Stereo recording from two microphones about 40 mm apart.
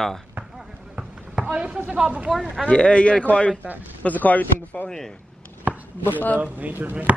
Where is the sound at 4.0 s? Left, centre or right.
Left.